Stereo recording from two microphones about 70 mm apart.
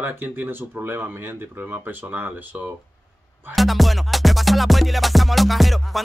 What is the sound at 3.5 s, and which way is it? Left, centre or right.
Music, centre.